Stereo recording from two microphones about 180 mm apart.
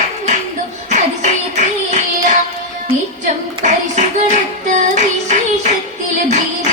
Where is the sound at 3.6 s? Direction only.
40° right (ahead or behind).